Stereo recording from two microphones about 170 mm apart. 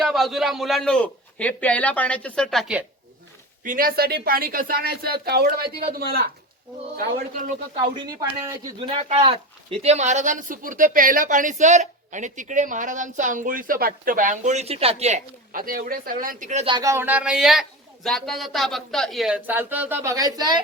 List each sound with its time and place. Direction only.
0.0 s a man's voice: centre (ahead or behind)
3.6 s speech: 55° right (ahead or behind)
7.9 s speech: 20° right (ahead or behind)
8.8 s speech: 35° right (ahead or behind)
15.5 s speech: 55° right (ahead or behind)
16.6 s a man's voice: 25° right (ahead or behind)